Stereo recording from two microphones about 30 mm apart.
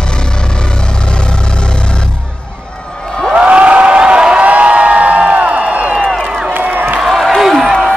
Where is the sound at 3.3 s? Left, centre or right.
Right.